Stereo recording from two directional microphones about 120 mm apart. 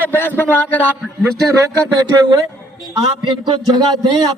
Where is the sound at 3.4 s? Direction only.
35° right (ahead or behind).